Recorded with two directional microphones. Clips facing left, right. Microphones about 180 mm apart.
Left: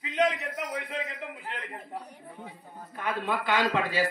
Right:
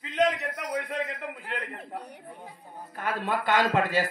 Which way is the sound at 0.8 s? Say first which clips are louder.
Right 3 dB; 55° right (ahead or behind).